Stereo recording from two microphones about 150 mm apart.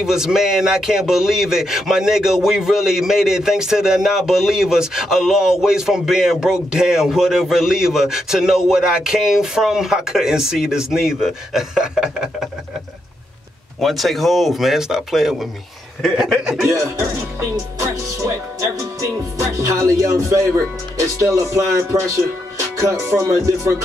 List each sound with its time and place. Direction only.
0.0 s speech: 5° right (ahead or behind)
13.7 s speech: centre (ahead or behind)
17.7 s speech: 20° right (ahead or behind)